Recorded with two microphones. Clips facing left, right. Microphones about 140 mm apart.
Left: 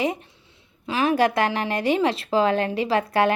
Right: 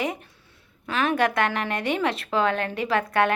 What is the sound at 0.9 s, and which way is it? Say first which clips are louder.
A woman's voice: left 3 dB; 30° left (ahead or behind).